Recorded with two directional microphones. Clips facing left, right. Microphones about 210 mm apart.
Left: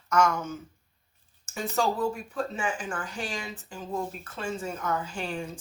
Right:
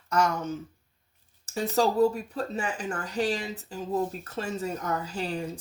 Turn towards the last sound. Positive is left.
turn(degrees=-35)  # may be behind; listen again after turning